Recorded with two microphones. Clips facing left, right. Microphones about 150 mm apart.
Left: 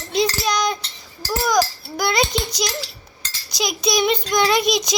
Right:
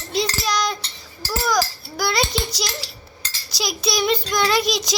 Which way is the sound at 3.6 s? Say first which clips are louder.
Left 3 dB; 20° left (ahead or behind).